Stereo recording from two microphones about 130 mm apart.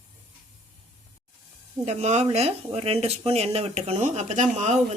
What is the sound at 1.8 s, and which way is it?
Speech, 60° right (ahead or behind).